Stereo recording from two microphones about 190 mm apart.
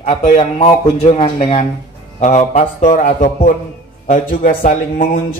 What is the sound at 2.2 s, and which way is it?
A man's voice, 40° left (ahead or behind).